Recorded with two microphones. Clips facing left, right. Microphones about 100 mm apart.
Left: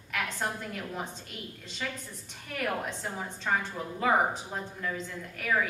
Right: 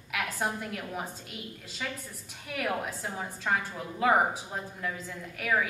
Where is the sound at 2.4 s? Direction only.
5° right (ahead or behind).